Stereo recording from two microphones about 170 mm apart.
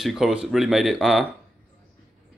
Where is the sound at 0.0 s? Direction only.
Centre (ahead or behind).